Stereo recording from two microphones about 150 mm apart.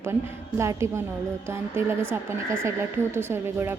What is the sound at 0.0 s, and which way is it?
Speech, 15° right (ahead or behind).